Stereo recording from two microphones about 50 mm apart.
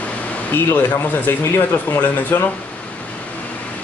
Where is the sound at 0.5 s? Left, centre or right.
Left.